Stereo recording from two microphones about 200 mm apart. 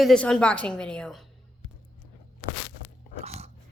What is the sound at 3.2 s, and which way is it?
Biting, 30° right (ahead or behind).